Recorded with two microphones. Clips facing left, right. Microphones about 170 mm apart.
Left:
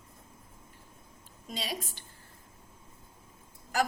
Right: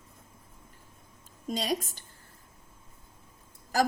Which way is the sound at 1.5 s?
45° right (ahead or behind).